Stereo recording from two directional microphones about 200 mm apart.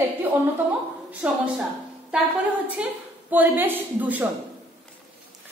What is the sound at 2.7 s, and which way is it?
A woman's voice, 10° right (ahead or behind).